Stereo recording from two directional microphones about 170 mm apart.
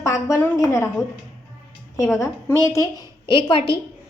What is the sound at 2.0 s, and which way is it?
Speech, 15° left (ahead or behind).